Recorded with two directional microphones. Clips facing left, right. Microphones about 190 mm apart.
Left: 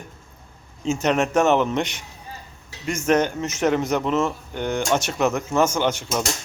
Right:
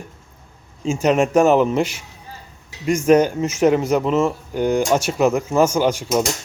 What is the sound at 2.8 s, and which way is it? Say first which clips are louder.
Speech: right 8 dB; 35° right (ahead or behind).